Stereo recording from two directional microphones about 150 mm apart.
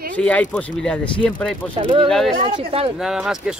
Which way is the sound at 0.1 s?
10° left (ahead or behind).